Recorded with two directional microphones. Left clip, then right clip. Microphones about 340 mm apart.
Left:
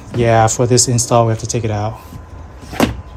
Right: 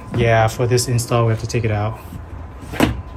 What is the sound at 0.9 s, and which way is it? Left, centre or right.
Speech, centre.